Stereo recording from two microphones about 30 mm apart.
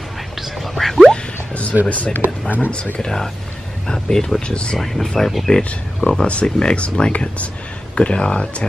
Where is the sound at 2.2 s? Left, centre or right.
Right.